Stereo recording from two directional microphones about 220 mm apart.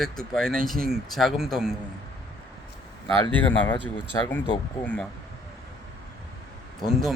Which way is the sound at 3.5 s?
10° left (ahead or behind).